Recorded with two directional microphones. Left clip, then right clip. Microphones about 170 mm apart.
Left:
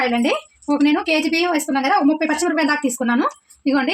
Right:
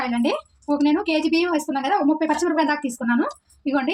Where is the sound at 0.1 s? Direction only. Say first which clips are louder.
Left 4 dB; 40° left (ahead or behind).